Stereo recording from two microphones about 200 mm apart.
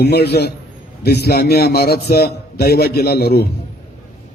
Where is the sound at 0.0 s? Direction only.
55° left (ahead or behind).